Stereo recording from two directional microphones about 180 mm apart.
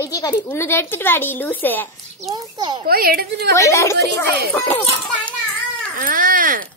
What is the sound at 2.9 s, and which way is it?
Speech, 55° right (ahead or behind).